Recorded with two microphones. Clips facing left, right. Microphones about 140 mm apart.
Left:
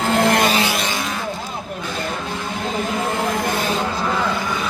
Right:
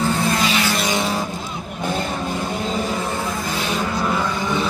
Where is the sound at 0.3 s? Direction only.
55° left (ahead or behind).